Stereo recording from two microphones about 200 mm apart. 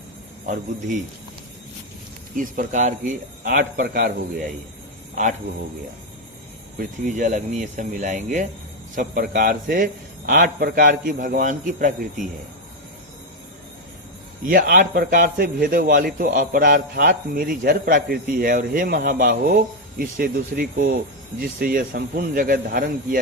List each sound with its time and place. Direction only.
0.4 s a man's voice: 40° right (ahead or behind)
2.3 s a man's voice: 40° right (ahead or behind)
6.7 s a man's voice: 40° right (ahead or behind)
14.4 s a man's voice: 45° right (ahead or behind)